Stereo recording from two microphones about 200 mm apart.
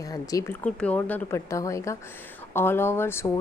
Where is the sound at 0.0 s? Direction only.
15° left (ahead or behind).